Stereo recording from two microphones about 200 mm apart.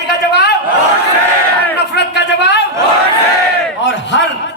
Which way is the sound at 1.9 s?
60° left (ahead or behind).